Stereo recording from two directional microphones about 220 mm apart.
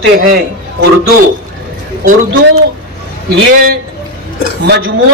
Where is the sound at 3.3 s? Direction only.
45° right (ahead or behind).